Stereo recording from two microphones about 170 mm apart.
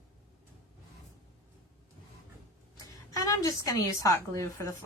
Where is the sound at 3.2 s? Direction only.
20° left (ahead or behind).